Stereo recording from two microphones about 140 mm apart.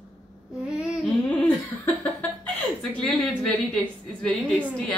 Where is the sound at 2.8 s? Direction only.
5° left (ahead or behind).